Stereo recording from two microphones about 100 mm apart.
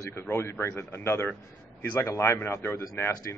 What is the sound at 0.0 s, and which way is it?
A man's voice, 25° left (ahead or behind).